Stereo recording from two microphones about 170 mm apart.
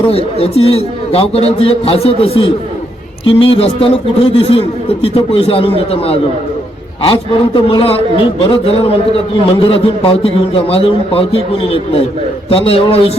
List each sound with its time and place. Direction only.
0.1 s a man's voice: 35° left (ahead or behind)